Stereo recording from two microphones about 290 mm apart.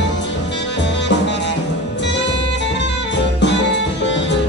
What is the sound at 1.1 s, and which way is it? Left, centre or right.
Music, left.